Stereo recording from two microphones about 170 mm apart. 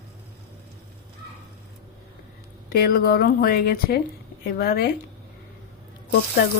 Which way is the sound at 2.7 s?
60° left (ahead or behind).